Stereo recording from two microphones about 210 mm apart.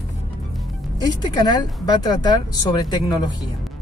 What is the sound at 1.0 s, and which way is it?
Speech, 20° left (ahead or behind).